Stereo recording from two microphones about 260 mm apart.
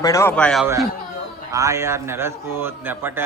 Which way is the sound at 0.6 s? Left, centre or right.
Centre.